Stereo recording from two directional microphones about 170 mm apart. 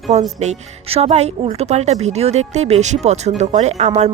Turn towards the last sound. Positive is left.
turn(degrees=-40)  # may be behind; listen again after turning